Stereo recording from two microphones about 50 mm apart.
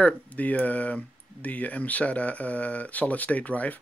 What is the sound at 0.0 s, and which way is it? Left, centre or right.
Speech, left.